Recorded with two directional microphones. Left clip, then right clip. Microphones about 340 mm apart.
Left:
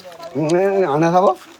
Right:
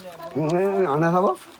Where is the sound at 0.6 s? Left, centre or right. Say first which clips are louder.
Left 5 dB; left.